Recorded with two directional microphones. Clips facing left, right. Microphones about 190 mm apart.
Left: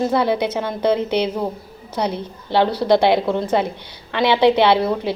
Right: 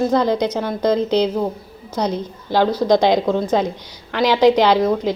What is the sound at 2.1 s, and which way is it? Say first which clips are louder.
Speech: left 1 dB; 15° right (ahead or behind).